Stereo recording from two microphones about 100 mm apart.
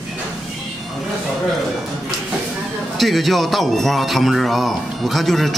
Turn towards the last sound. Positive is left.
turn(degrees=0)  # may be behind; listen again after turning